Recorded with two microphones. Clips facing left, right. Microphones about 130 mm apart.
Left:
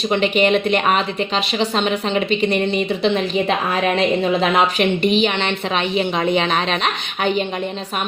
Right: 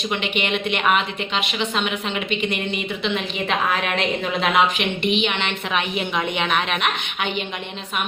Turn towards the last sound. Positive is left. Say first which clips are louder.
# left 6 dB
turn(degrees=40)  # may be behind; listen again after turning